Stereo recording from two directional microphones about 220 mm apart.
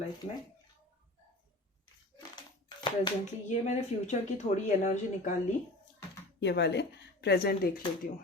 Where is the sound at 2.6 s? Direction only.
20° left (ahead or behind).